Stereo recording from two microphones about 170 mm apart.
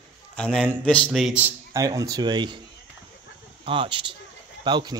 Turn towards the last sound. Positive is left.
turn(degrees=-25)  # may be behind; listen again after turning